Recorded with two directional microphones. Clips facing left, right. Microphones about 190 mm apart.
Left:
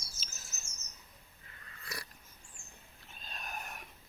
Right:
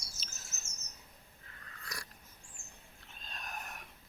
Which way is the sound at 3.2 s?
5° left (ahead or behind).